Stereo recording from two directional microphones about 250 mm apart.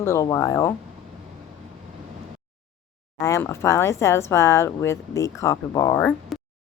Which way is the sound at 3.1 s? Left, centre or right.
Centre.